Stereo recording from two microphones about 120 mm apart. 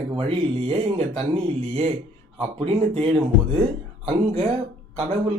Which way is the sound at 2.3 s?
50° right (ahead or behind).